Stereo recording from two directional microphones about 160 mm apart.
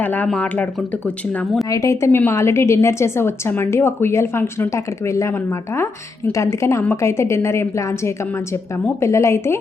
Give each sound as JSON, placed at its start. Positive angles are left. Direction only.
{"t": 0.0, "sound": "a woman's voice", "side_deg": 10}
{"t": 1.7, "sound": "a woman's voice", "side_deg": 20}